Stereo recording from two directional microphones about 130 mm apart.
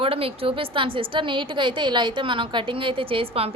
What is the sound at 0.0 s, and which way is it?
A woman's voice, 45° right (ahead or behind).